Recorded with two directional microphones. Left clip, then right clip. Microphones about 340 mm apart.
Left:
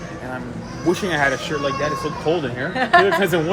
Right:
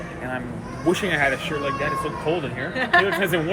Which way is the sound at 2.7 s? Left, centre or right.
Left.